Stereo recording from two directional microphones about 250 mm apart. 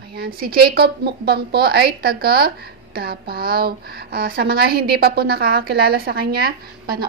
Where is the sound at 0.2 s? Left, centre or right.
Right.